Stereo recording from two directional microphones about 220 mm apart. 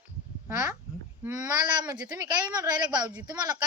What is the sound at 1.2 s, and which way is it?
Speech, 15° right (ahead or behind).